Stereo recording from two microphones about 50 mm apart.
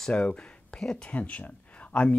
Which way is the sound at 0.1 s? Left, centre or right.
Centre.